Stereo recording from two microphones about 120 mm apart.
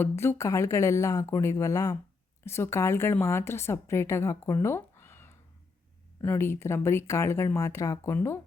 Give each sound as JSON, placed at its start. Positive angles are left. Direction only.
{"t": 0.0, "sound": "a woman's voice", "side_deg": 20}